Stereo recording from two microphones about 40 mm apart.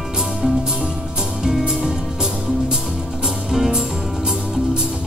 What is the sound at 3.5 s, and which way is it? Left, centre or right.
Music, centre.